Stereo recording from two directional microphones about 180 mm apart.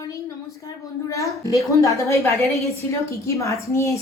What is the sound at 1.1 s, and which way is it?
A woman's voice, 20° left (ahead or behind).